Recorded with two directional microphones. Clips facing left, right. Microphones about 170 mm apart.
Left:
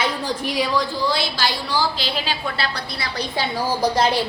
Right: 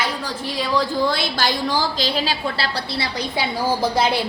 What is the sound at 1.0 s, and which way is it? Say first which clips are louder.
A woman's voice: right 1 dB; 55° right (ahead or behind).